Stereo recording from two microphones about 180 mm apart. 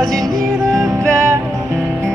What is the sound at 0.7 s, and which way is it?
Music, 15° right (ahead or behind).